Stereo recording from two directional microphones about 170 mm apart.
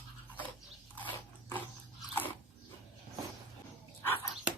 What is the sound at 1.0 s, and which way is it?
Dog, 10° left (ahead or behind).